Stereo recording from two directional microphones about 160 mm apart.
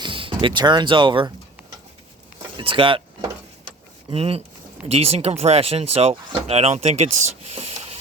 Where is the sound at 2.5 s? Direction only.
35° right (ahead or behind).